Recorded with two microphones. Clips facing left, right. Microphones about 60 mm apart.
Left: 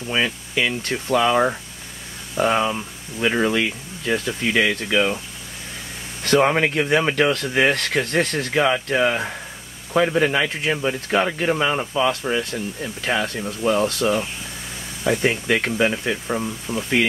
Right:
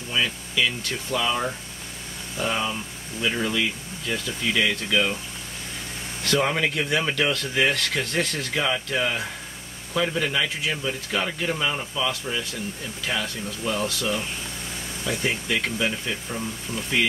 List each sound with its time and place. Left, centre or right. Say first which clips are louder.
0.1 s speech: left 4 dB; left
6.2 s speech: left 6 dB; left
16.7 s speech: left 7 dB; centre